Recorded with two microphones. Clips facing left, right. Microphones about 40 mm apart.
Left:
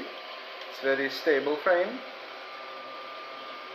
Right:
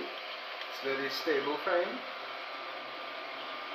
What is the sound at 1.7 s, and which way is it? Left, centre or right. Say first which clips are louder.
Speech: left 6 dB; left.